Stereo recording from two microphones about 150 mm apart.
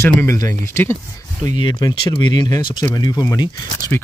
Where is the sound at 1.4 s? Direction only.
30° left (ahead or behind).